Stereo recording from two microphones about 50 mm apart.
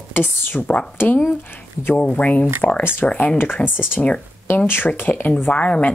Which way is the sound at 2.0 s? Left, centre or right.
Left.